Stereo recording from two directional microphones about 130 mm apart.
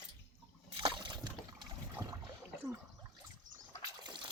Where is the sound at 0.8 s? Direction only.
40° right (ahead or behind).